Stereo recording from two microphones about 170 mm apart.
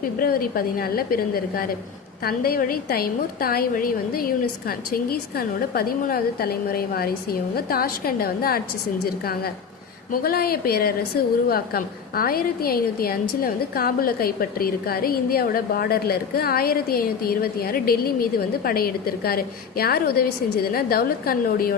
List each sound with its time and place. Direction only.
0.2 s a woman's voice: 60° left (ahead or behind)